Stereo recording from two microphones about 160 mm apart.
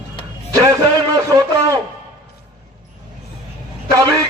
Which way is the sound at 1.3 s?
20° right (ahead or behind).